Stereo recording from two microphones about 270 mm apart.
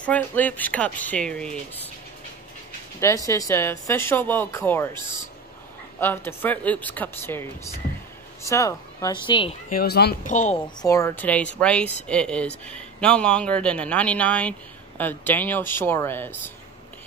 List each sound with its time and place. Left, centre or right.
0.0 s a man's voice: centre
3.3 s speech: centre
5.9 s speech: centre
9.8 s speech: left
10.8 s a man's voice: centre